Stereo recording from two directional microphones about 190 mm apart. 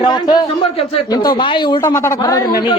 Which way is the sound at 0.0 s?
25° left (ahead or behind).